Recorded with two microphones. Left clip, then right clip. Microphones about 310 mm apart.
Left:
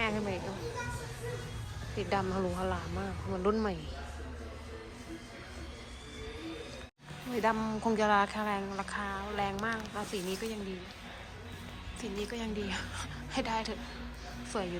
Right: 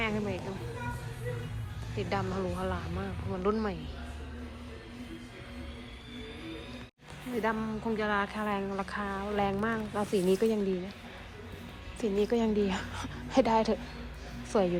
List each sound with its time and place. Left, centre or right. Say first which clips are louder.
0.0 s children playing: even; centre
2.0 s speech: left 1 dB; centre
7.4 s speech: left 2 dB; centre
11.9 s speech: right 10 dB; centre